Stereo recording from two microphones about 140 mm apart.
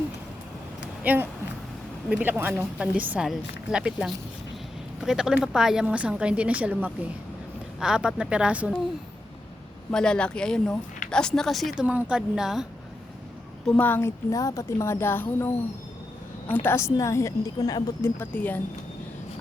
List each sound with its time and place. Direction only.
1.0 s a woman's voice: 10° right (ahead or behind)
9.9 s speech: 5° left (ahead or behind)
11.8 s speech: 10° right (ahead or behind)
13.7 s speech: 15° left (ahead or behind)
16.6 s a woman's voice: 20° left (ahead or behind)
18.2 s speech: 10° left (ahead or behind)